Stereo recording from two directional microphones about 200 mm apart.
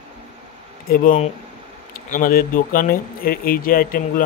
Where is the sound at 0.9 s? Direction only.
45° left (ahead or behind).